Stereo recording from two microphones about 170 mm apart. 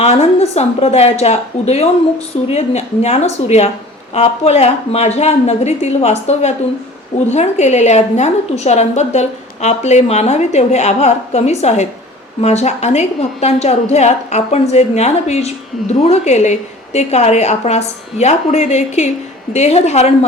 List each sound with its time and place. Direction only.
0.0 s a woman's voice: 40° left (ahead or behind)